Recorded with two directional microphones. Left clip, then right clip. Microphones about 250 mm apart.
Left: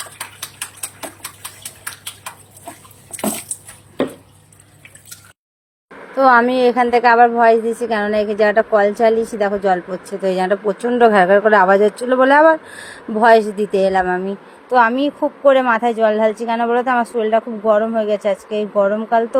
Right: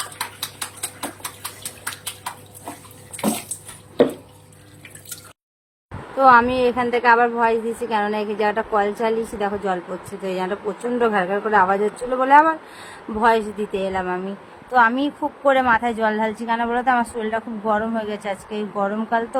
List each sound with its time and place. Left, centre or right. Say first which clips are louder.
6.1 s speech: left 2 dB; centre